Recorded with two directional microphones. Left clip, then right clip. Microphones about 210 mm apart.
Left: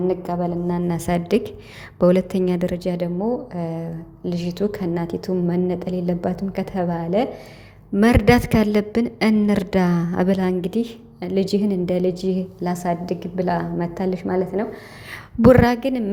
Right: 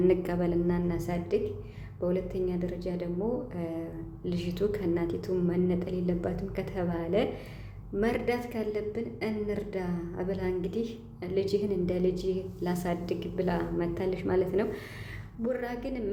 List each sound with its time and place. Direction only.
0.1 s a woman's voice: 5° left (ahead or behind)
0.9 s a woman's voice: 35° left (ahead or behind)
3.5 s a woman's voice: 25° left (ahead or behind)
7.9 s a woman's voice: 40° left (ahead or behind); by 14.8 s 10° left (ahead or behind)
15.4 s a woman's voice: 50° left (ahead or behind)